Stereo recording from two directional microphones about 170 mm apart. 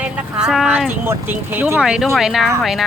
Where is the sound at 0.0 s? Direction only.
5° right (ahead or behind).